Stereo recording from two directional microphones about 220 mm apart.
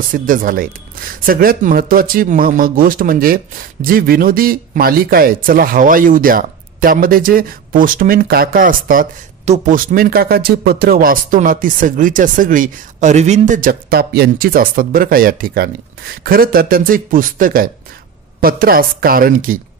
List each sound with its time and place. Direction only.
0.1 s speech: 40° right (ahead or behind)